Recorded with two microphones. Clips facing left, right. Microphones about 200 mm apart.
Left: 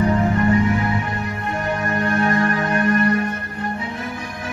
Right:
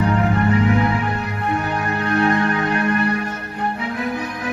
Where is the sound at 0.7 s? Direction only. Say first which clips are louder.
Right 3 dB; 65° right (ahead or behind).